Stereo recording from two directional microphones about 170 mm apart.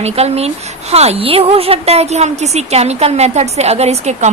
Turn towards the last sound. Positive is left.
turn(degrees=-40)  # may be behind; listen again after turning